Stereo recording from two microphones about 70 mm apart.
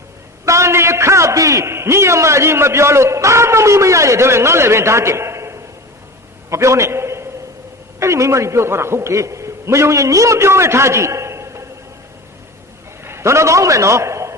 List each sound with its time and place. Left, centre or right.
0.4 s a man's voice: right
6.5 s a sound: right
7.9 s a man's voice: right
13.1 s a man's voice: right